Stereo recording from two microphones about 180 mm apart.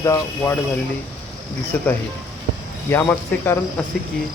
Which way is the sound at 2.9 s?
10° left (ahead or behind).